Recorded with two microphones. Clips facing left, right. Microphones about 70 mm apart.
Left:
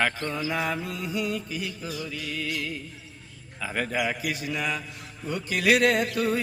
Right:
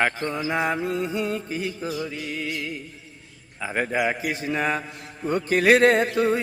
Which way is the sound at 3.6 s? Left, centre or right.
Right.